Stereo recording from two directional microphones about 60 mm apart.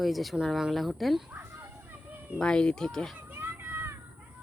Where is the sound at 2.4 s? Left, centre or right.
Centre.